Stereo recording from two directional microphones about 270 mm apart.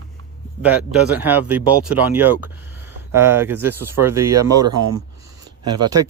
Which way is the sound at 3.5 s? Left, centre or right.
Right.